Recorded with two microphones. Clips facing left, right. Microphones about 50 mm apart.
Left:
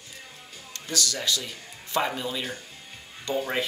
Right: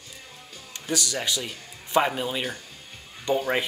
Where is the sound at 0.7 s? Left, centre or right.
Centre.